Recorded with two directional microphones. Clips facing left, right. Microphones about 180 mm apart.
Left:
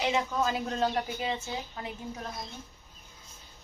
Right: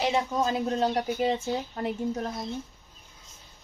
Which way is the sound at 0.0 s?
35° right (ahead or behind).